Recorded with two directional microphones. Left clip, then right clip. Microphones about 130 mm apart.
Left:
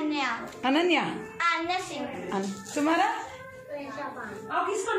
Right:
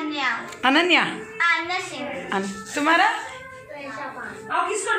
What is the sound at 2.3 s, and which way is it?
Speech, centre (ahead or behind).